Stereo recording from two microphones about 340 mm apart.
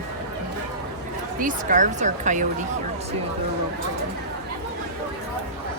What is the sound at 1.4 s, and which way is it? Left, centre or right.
Speech, right.